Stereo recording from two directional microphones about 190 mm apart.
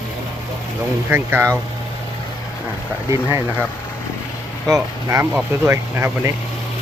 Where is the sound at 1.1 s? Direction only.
10° right (ahead or behind).